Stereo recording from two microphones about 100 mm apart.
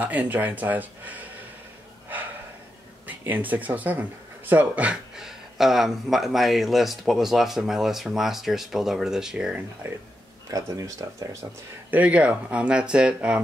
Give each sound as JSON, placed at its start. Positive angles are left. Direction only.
{"t": 0.0, "sound": "speech", "side_deg": -15}
{"t": 3.1, "sound": "speech", "side_deg": -15}
{"t": 9.8, "sound": "speech", "side_deg": -25}
{"t": 10.5, "sound": "speech", "side_deg": -35}
{"t": 11.9, "sound": "speech", "side_deg": -15}